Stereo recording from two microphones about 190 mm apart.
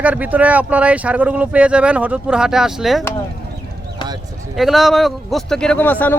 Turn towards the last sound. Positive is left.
turn(degrees=10)  # may be behind; listen again after turning